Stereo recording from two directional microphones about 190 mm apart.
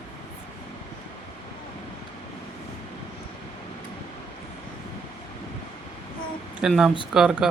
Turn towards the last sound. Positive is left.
turn(degrees=-5)  # may be behind; listen again after turning